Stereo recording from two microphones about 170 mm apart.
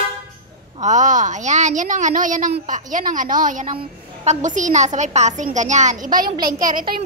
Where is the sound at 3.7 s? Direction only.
35° right (ahead or behind); by 7.1 s 55° right (ahead or behind).